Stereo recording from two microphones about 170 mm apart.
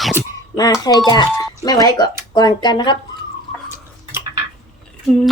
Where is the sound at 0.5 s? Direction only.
20° left (ahead or behind).